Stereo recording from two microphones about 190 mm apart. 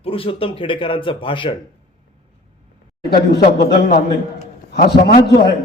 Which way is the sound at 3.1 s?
55° left (ahead or behind).